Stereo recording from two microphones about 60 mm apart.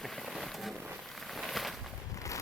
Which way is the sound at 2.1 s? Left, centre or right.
Left.